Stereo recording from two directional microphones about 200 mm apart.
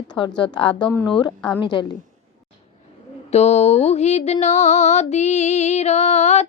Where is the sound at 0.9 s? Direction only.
5° left (ahead or behind).